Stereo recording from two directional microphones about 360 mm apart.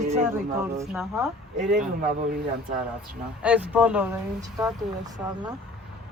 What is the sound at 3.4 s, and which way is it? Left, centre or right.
Speech, centre.